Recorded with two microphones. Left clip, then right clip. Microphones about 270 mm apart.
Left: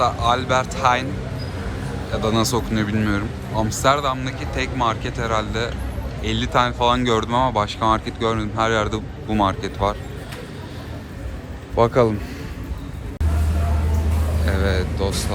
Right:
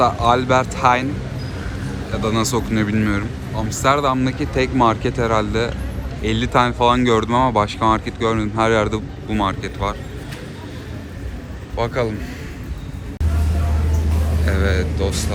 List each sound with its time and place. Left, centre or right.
0.0 s speech: centre
2.1 s speech: centre
11.8 s a man's voice: left
14.4 s speech: centre